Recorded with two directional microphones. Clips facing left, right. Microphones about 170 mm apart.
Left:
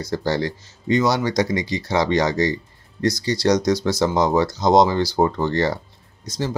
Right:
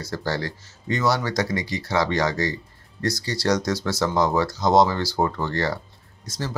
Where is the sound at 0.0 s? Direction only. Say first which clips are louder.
Left 5 dB; 20° left (ahead or behind).